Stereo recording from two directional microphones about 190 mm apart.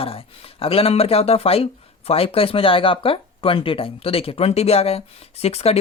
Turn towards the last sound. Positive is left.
turn(degrees=30)  # may be behind; listen again after turning